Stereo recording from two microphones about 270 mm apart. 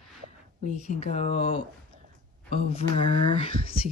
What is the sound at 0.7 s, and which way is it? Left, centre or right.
Speech, left.